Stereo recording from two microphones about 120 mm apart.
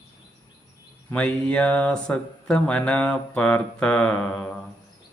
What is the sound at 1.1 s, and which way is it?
Speech, 10° left (ahead or behind).